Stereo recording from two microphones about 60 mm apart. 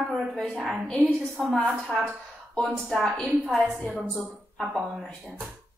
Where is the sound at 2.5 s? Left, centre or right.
Centre.